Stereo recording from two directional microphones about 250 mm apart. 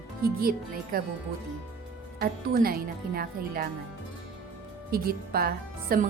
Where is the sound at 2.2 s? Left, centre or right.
Right.